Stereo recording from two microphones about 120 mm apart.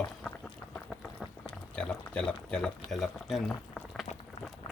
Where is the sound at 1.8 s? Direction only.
10° left (ahead or behind).